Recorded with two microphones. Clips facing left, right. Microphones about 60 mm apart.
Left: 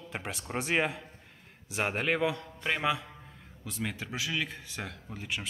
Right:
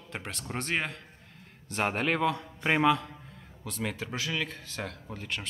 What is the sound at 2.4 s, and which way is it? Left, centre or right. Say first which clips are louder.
Speech: right 4 dB; centre.